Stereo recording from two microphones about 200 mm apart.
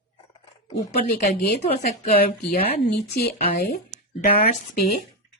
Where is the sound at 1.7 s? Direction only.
35° left (ahead or behind).